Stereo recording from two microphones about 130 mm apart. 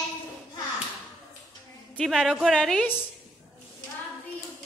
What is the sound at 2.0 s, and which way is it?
Speech, 5° left (ahead or behind).